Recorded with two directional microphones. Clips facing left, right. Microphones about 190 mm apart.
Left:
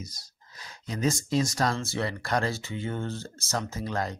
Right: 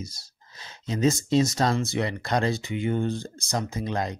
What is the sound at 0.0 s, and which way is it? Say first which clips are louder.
Speech: right 4 dB; 25° right (ahead or behind).